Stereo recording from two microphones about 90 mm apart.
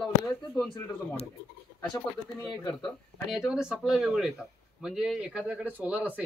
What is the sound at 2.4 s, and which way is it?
Speech, 45° left (ahead or behind).